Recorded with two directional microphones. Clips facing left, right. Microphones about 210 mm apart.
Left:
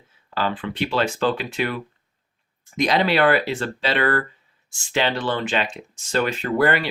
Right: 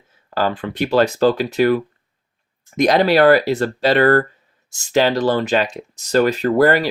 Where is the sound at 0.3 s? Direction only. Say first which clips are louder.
Right 5 dB; 45° right (ahead or behind).